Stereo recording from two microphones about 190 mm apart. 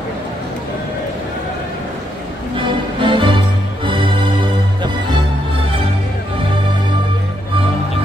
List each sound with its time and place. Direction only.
3.0 s music: 25° right (ahead or behind)